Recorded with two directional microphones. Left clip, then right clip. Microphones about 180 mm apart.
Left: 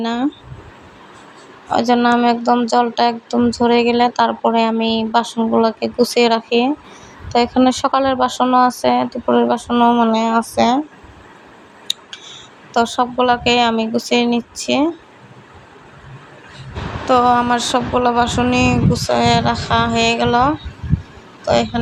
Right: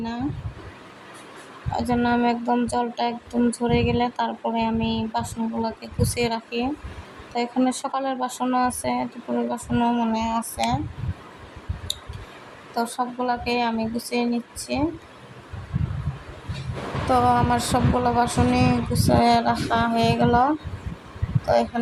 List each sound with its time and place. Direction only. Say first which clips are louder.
0.0 s speech: left 10 dB; 35° left (ahead or behind)
1.7 s speech: left 9 dB; 25° left (ahead or behind)
11.9 s a sound: left 8 dB; 25° left (ahead or behind)
12.7 s speech: left 10 dB; 30° left (ahead or behind)
17.1 s speech: left 6 dB; 20° left (ahead or behind)